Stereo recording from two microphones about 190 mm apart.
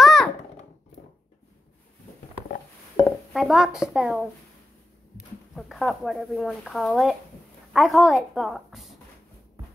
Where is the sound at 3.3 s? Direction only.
Centre (ahead or behind).